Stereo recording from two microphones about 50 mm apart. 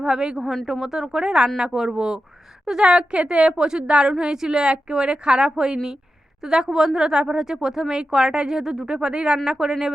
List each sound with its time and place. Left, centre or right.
0.0 s speech: centre
0.3 s a woman's voice: centre